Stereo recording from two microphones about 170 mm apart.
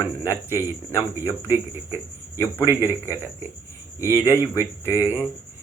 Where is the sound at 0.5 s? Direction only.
15° right (ahead or behind).